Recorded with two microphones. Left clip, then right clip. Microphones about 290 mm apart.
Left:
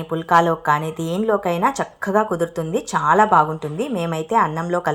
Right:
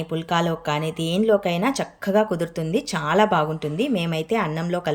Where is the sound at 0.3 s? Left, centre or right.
Centre.